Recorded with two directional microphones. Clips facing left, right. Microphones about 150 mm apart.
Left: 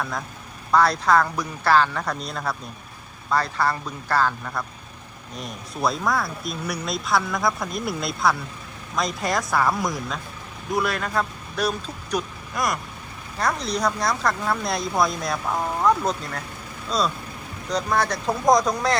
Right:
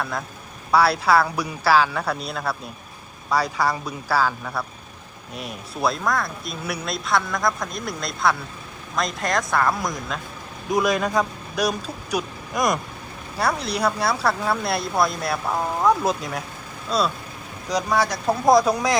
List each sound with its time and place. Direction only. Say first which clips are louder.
0.0 s speech: right 1 dB; centre (ahead or behind)
10.7 s speech: right 4 dB; 15° right (ahead or behind)
13.4 s speech: right 1 dB; 5° right (ahead or behind)